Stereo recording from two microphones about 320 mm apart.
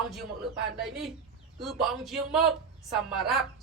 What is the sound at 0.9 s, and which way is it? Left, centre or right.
A man's voice, centre.